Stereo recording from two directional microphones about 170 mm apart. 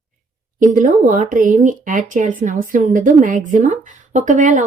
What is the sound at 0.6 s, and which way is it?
Speech, 50° right (ahead or behind).